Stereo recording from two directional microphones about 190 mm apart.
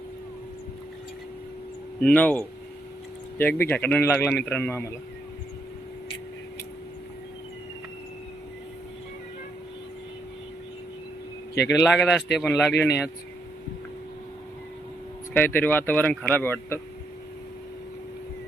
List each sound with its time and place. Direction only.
2.0 s speech: 5° left (ahead or behind)
11.5 s speech: 60° left (ahead or behind)
11.8 s speech: 10° left (ahead or behind)
12.8 s speech: 10° left (ahead or behind)
15.3 s speech: 10° left (ahead or behind)